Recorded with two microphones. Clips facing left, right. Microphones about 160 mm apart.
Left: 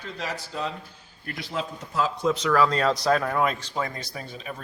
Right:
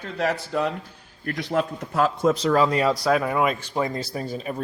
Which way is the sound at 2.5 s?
15° right (ahead or behind).